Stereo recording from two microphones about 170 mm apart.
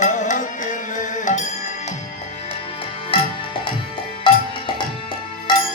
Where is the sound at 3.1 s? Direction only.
30° left (ahead or behind).